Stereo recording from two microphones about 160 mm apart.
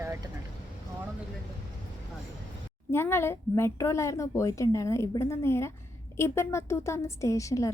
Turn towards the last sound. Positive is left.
turn(degrees=20)  # may be behind; listen again after turning